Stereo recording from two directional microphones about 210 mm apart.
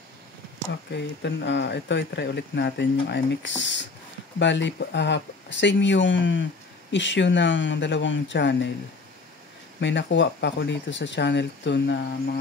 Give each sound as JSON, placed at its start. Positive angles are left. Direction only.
{"t": 0.9, "sound": "speech", "side_deg": 55}
{"t": 9.8, "sound": "speech", "side_deg": 55}